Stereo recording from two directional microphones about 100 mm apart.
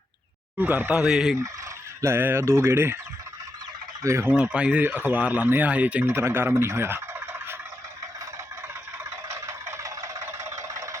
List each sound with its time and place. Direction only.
0.6 s speech: 20° right (ahead or behind)
1.0 s fowl: 5° right (ahead or behind)
2.0 s fowl: 25° right (ahead or behind)
4.0 s fowl: 30° right (ahead or behind)
4.4 s speech: 10° right (ahead or behind)
6.1 s speech: 25° right (ahead or behind)
9.0 s fowl: 25° right (ahead or behind)